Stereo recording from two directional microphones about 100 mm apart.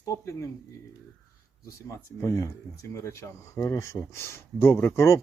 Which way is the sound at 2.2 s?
35° left (ahead or behind).